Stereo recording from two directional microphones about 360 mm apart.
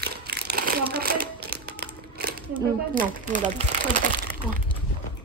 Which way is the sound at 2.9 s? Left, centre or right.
Right.